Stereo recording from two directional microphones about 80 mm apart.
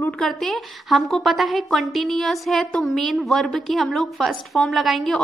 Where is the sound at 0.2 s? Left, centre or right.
Centre.